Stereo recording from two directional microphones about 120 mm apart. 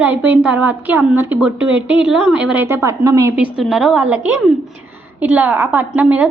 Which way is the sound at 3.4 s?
5° right (ahead or behind).